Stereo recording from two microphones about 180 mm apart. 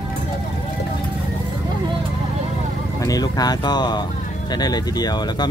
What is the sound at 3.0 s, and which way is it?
Speech, 20° left (ahead or behind).